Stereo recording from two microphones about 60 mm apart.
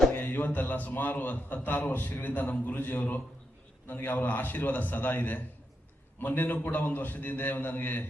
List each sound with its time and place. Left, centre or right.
0.1 s a man's voice: left